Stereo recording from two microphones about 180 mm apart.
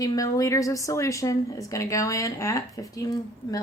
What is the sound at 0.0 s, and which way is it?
A woman's voice, 20° left (ahead or behind).